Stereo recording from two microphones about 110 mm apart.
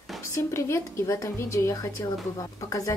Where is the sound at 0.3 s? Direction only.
25° left (ahead or behind).